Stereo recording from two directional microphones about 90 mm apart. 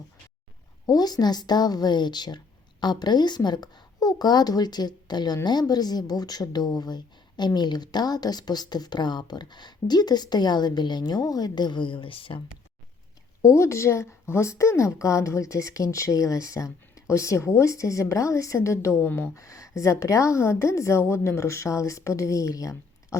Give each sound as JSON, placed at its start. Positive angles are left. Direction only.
{"t": 0.9, "sound": "a woman's voice", "side_deg": 45}
{"t": 13.4, "sound": "a woman's voice", "side_deg": 35}
{"t": 19.4, "sound": "a woman's voice", "side_deg": 35}